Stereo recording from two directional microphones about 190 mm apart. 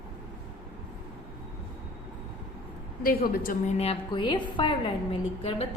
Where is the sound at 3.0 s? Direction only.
50° left (ahead or behind).